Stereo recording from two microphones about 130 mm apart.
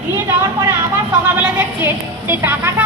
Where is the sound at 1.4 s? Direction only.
15° right (ahead or behind).